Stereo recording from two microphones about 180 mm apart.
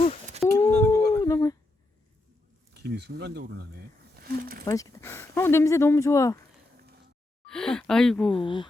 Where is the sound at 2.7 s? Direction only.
65° right (ahead or behind).